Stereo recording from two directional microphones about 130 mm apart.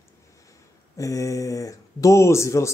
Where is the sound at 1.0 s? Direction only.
25° left (ahead or behind).